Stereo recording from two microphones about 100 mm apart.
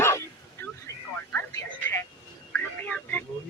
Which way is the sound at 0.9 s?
30° left (ahead or behind).